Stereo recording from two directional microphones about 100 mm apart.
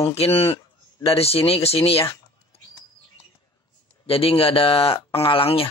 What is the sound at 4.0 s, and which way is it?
Speech, 70° left (ahead or behind).